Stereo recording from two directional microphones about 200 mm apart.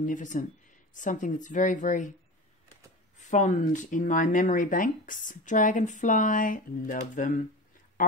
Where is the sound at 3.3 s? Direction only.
40° left (ahead or behind).